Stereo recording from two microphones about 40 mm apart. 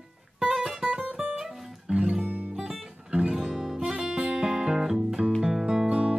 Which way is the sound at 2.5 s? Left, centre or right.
Centre.